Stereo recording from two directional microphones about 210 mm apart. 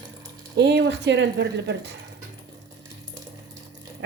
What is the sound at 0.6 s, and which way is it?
Speech, 55° right (ahead or behind).